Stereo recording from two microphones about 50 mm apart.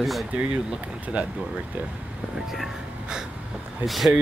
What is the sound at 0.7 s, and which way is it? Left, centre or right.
Speech, right.